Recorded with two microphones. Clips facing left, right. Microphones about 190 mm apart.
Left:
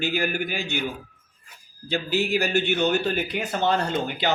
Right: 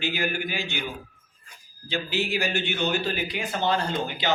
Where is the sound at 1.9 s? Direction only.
40° left (ahead or behind).